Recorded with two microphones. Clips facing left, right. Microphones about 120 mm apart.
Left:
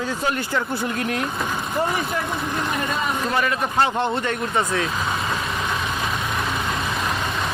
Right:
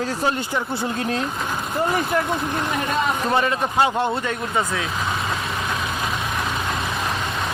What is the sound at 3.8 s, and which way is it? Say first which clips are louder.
Speech: right 1 dB; 10° right (ahead or behind).